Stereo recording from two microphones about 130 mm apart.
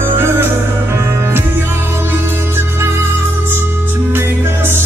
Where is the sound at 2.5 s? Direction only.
20° right (ahead or behind).